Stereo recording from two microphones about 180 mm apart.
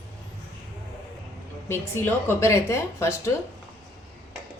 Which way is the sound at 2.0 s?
10° left (ahead or behind).